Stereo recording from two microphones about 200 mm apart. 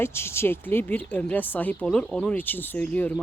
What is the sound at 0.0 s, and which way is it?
Speech, 10° left (ahead or behind).